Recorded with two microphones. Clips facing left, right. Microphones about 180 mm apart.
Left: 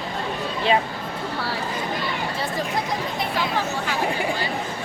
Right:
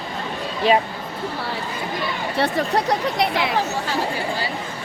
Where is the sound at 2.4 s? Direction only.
70° right (ahead or behind).